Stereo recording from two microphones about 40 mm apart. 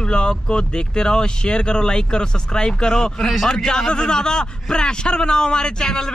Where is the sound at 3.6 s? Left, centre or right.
Centre.